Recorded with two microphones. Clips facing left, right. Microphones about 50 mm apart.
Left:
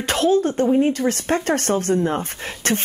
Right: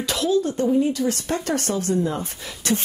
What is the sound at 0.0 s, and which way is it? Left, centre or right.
Speech, left.